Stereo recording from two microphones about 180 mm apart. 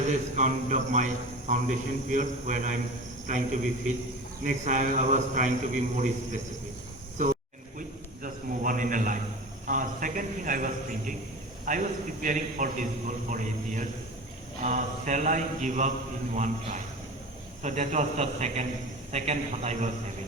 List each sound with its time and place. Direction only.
0.1 s a man's voice: 40° right (ahead or behind)
7.8 s a sound: 50° right (ahead or behind)
11.6 s a man's voice: 45° right (ahead or behind)
17.6 s a man's voice: 40° right (ahead or behind)